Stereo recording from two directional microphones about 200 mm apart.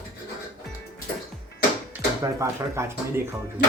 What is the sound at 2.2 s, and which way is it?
Speech, 15° right (ahead or behind).